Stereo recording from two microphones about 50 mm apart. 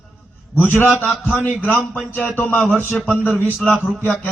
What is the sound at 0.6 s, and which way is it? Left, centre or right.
Speech, left.